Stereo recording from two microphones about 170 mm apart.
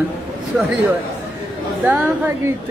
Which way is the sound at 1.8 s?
10° right (ahead or behind).